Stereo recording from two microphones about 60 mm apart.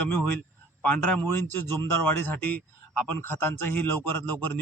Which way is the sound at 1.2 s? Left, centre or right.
Left.